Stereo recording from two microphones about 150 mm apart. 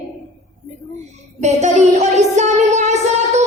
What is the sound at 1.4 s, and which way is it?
Music, 50° right (ahead or behind).